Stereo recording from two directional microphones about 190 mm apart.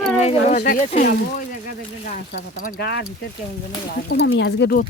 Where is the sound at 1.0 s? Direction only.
50° left (ahead or behind); by 4.7 s 70° left (ahead or behind).